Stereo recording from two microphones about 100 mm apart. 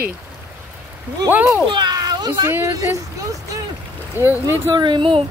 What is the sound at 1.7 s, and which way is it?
Children playing, 45° right (ahead or behind).